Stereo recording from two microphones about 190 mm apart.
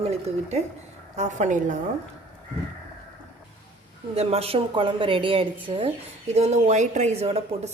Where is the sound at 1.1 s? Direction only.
40° right (ahead or behind).